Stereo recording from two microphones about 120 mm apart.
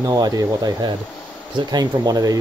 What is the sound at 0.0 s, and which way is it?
Speech, 35° right (ahead or behind).